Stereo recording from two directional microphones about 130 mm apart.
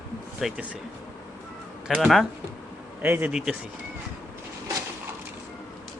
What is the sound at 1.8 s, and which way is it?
Speech, 5° right (ahead or behind).